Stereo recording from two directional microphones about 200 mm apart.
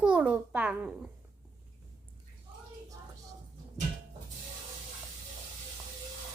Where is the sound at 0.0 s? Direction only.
5° right (ahead or behind).